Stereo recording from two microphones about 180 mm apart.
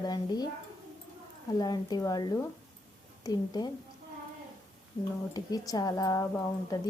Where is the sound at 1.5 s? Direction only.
20° left (ahead or behind).